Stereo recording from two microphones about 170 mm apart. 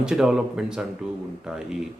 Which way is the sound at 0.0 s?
5° right (ahead or behind).